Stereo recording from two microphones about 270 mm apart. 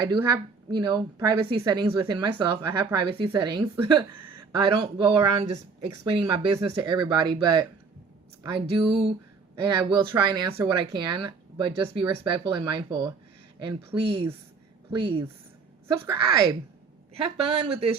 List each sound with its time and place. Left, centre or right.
0.1 s a woman's voice: centre
4.1 s a sound: right
4.5 s a woman's voice: centre
8.9 s a woman's voice: centre